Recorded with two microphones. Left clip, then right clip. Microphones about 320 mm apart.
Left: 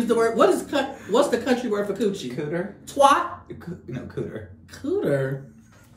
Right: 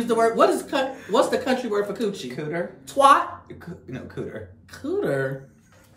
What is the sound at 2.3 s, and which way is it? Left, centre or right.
Speech, centre.